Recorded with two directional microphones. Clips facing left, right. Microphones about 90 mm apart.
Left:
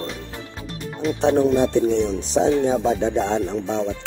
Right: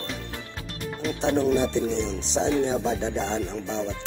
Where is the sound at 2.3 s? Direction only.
45° left (ahead or behind).